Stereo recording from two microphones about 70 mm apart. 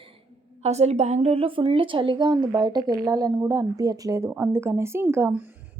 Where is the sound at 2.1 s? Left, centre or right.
Right.